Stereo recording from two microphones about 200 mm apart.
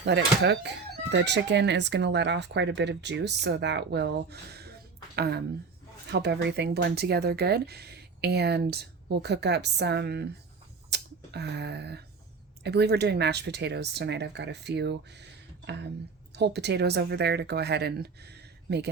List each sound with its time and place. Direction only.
0.0 s speech: 60° right (ahead or behind)
10.8 s a sound: 55° right (ahead or behind)
12.6 s speech: 55° right (ahead or behind)